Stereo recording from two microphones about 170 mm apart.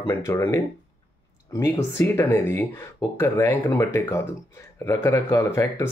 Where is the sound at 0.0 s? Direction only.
15° left (ahead or behind).